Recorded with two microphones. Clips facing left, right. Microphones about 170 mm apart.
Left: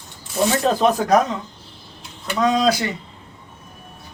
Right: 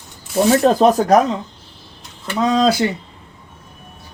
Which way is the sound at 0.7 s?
40° right (ahead or behind).